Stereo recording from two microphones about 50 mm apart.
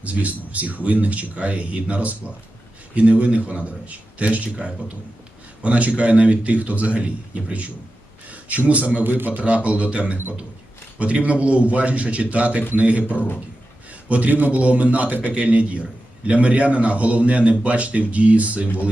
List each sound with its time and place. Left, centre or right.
0.0 s speech: right
8.3 s a man's voice: right
9.0 s speech: right
9.6 s speech: right